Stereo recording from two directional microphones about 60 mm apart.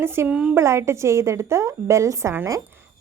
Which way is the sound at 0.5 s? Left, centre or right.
Right.